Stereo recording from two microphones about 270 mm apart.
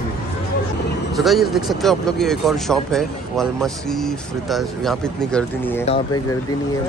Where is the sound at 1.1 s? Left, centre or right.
Centre.